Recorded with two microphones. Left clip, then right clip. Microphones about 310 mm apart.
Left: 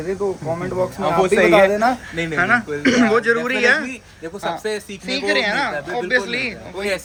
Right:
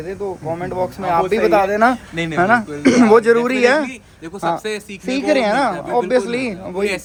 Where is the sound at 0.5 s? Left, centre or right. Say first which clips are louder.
Even; centre.